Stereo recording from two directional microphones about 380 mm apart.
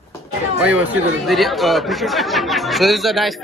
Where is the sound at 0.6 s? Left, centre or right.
Centre.